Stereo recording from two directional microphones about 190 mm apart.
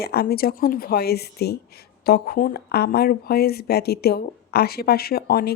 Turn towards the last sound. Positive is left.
turn(degrees=55)  # may be behind; listen again after turning